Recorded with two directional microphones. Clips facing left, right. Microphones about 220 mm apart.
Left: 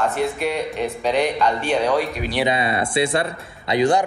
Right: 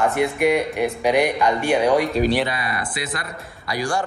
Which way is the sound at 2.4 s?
25° left (ahead or behind).